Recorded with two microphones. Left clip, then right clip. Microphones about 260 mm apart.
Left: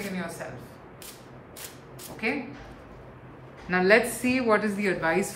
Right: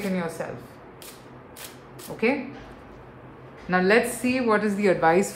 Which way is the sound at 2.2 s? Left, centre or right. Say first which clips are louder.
Right 5 dB; centre.